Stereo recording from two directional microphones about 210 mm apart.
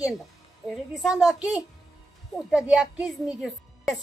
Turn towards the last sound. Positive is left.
turn(degrees=0)  # may be behind; listen again after turning